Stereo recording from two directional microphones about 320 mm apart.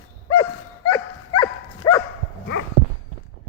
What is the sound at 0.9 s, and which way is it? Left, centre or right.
Dog, centre.